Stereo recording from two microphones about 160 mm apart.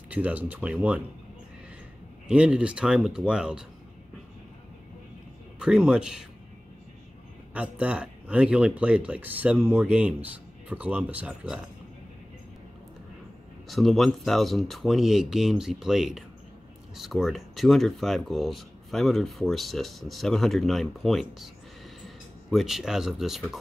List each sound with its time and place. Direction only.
0.1 s speech: 10° right (ahead or behind)
2.2 s speech: 5° right (ahead or behind)
5.6 s speech: 5° right (ahead or behind)
7.5 s speech: 10° right (ahead or behind)
13.7 s speech: centre (ahead or behind)